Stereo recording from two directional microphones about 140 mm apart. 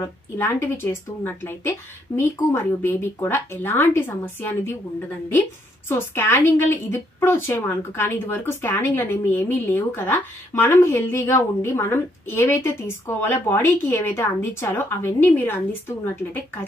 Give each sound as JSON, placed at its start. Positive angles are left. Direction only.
{"t": 0.0, "sound": "a woman's voice", "side_deg": 15}
{"t": 5.9, "sound": "a woman's voice", "side_deg": 15}